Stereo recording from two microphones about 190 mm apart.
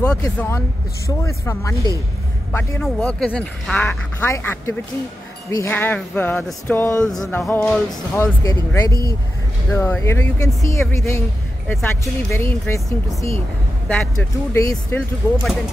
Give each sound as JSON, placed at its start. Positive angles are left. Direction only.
{"t": 0.0, "sound": "speech", "side_deg": 5}
{"t": 8.2, "sound": "speech", "side_deg": 15}
{"t": 14.5, "sound": "speech", "side_deg": 15}
{"t": 15.0, "sound": "speech", "side_deg": 0}